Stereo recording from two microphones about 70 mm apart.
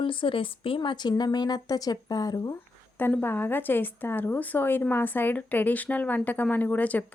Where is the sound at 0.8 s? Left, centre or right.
Left.